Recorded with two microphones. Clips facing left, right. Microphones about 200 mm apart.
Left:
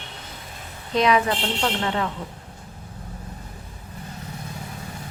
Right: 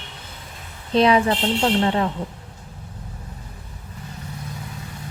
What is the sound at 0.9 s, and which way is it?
A woman's voice, 30° right (ahead or behind).